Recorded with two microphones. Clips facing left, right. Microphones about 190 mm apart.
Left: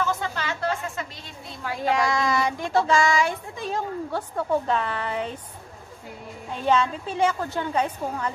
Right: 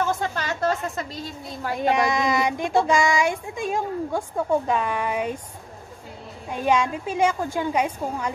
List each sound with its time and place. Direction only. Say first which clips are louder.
0.4 s a sound: right 3 dB; 40° right (ahead or behind)
1.8 s child singing: right 2 dB; 20° right (ahead or behind)
6.5 s child singing: right 1 dB; 15° right (ahead or behind)